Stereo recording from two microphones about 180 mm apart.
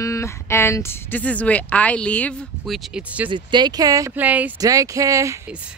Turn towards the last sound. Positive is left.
turn(degrees=-20)  # may be behind; listen again after turning